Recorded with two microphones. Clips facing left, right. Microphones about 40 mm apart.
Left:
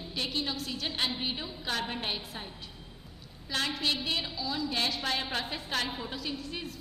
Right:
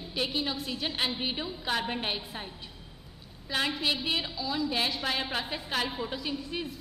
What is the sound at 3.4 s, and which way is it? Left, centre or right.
A woman's voice, centre.